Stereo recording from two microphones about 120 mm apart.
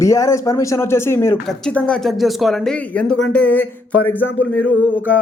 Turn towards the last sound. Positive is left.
turn(degrees=15)  # may be behind; listen again after turning